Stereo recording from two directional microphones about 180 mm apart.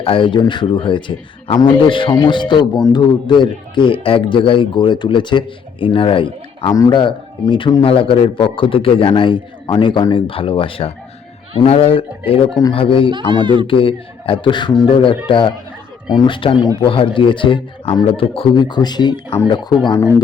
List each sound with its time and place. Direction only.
0.0 s a man's voice: 30° left (ahead or behind)
13.1 s speech: 25° right (ahead or behind)
13.7 s a man's voice: 30° left (ahead or behind)